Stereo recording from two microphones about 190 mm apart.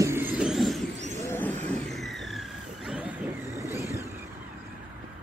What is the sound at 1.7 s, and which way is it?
Vehicle, centre (ahead or behind).